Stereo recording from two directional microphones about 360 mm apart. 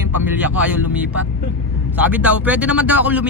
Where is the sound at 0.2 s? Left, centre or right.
Centre.